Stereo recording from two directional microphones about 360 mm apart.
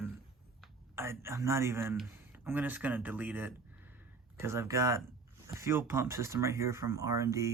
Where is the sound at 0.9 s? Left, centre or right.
Centre.